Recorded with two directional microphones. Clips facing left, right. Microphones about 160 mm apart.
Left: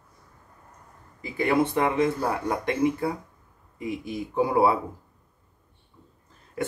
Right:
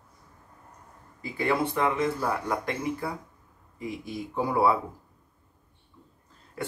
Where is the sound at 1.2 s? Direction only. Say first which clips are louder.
Left 4 dB; 20° left (ahead or behind).